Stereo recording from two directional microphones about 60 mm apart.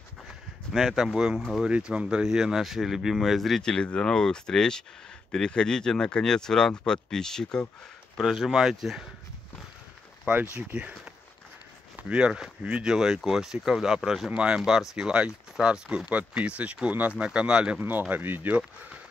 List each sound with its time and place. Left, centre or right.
0.7 s speech: centre
3.7 s speech: centre
8.2 s speech: centre
10.5 s speech: right
12.0 s speech: centre
17.7 s speech: right